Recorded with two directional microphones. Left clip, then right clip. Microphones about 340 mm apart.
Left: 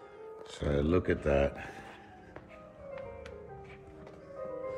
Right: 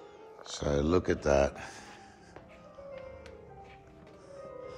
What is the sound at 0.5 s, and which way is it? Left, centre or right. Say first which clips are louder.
Speech: right 2 dB; centre.